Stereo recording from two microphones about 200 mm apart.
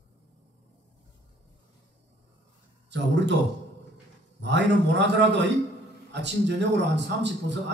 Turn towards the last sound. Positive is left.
turn(degrees=-60)  # may be behind; listen again after turning